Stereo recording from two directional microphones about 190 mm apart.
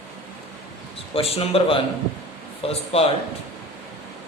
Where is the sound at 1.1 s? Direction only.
30° left (ahead or behind).